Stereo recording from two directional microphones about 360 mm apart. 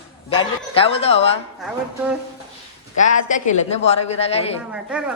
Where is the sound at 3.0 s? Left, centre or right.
Left.